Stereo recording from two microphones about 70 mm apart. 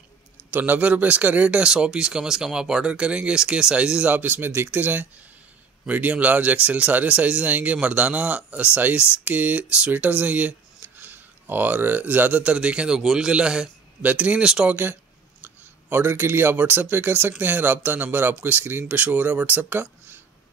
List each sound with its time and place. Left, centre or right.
0.5 s speech: right
15.4 s a sound: right
16.2 s speech: right